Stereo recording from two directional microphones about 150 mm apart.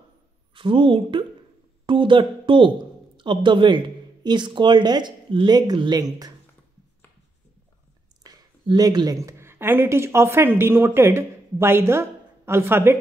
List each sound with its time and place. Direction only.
0.6 s a woman's voice: 35° right (ahead or behind)
8.2 s speech: 25° right (ahead or behind)